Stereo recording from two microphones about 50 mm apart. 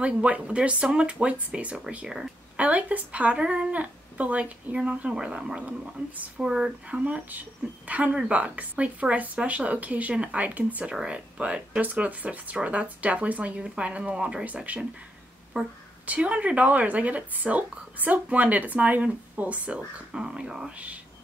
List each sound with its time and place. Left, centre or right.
0.0 s speech: right
2.5 s speech: right
6.0 s speech: right
6.3 s speech: centre
11.8 s speech: right
14.4 s speech: right
20.1 s speech: centre
20.7 s speech: right